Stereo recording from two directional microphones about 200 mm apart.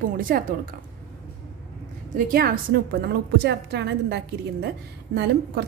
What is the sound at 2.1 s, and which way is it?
A woman's voice, 45° right (ahead or behind).